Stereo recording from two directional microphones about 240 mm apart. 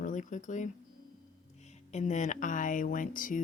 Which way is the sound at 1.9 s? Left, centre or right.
Left.